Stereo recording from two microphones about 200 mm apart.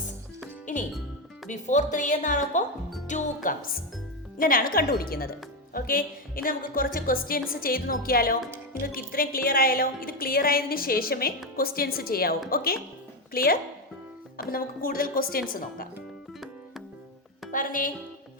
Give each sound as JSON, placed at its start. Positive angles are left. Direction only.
{"t": 1.5, "sound": "a woman's voice", "side_deg": 40}
{"t": 16.0, "sound": "music", "side_deg": 0}
{"t": 17.5, "sound": "speech", "side_deg": 40}